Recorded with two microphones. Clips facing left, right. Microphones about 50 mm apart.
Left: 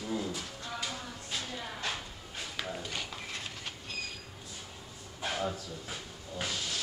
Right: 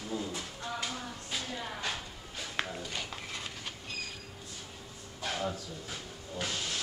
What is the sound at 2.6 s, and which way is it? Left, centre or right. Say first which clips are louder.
Walk: right 3 dB; right.